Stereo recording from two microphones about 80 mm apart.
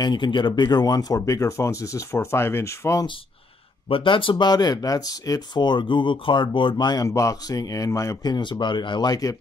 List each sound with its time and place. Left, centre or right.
0.0 s speech: left
0.7 s speech: left
4.0 s speech: left
5.5 s speech: left
7.1 s speech: left
8.2 s speech: left